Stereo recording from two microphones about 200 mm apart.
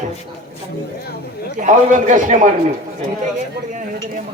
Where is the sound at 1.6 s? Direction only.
40° right (ahead or behind).